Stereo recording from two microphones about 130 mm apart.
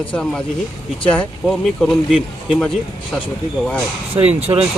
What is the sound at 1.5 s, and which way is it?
Speech, centre (ahead or behind).